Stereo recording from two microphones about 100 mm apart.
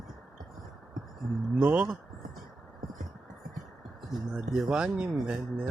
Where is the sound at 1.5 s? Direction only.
10° right (ahead or behind).